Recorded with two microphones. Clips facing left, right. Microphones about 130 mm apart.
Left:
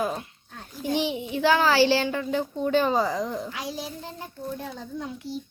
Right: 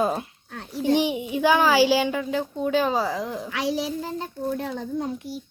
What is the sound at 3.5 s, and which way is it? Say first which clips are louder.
A child's voice: right 8 dB; 80° right.